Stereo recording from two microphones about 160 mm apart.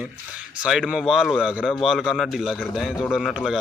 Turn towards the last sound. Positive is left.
turn(degrees=0)  # may be behind; listen again after turning